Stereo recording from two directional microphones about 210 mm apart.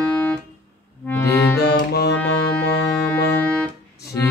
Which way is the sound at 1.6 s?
50° left (ahead or behind).